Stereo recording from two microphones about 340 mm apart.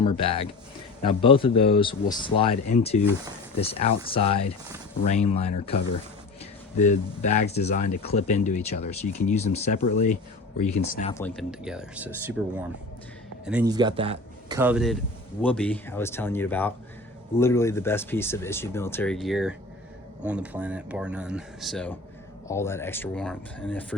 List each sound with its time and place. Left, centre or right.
0.0 s speech: centre
11.2 s speech: centre
13.4 s speech: centre
14.6 s speech: centre